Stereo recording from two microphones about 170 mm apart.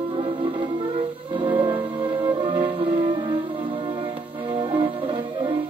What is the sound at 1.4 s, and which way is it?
Music, 25° right (ahead or behind).